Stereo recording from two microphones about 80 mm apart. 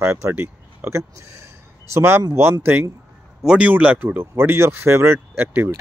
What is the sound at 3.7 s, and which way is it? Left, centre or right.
Speech, right.